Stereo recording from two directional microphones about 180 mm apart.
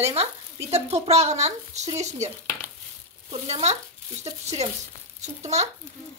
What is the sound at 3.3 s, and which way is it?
Speech, 35° right (ahead or behind).